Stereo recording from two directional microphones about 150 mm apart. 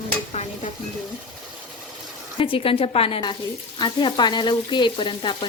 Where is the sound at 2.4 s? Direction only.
35° left (ahead or behind).